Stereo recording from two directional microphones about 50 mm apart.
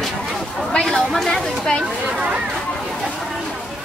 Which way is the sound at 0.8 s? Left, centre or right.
Centre.